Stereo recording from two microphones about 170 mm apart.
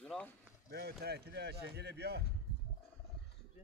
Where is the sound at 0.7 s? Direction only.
75° right (ahead or behind).